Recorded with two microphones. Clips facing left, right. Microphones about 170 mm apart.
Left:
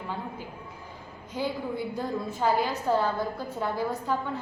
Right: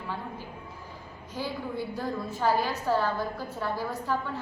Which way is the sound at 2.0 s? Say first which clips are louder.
Left 1 dB; 20° left (ahead or behind).